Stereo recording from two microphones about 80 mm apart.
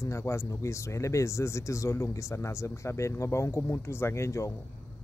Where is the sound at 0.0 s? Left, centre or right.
Left.